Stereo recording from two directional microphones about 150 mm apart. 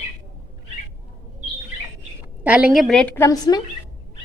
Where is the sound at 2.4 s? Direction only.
10° right (ahead or behind); by 3.3 s 10° left (ahead or behind).